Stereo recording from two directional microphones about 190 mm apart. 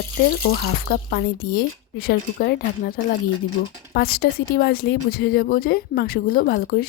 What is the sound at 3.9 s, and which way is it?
Speech, 55° left (ahead or behind).